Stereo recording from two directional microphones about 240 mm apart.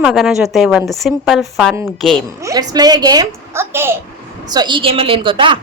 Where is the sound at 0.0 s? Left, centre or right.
Centre.